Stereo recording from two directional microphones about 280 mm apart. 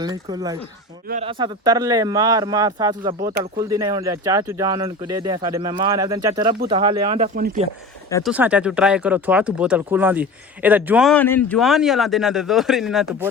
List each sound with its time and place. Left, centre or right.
0.0 s speech: centre
1.0 s speech: right
1.3 s speech: centre
8.2 s speech: centre